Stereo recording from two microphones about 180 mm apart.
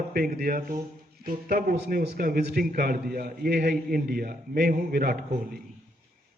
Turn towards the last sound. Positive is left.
turn(degrees=-55)  # may be behind; listen again after turning